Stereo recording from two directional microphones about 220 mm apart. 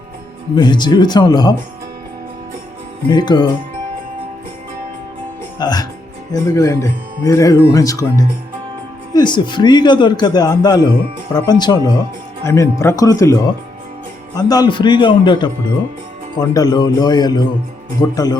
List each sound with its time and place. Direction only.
0.5 s a man's voice: 20° left (ahead or behind)
3.1 s a man's voice: 20° left (ahead or behind)
5.5 s speech: 20° left (ahead or behind)
9.1 s a man's voice: 20° left (ahead or behind)